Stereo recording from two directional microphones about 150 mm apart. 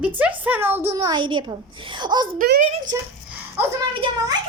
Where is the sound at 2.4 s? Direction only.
65° right (ahead or behind).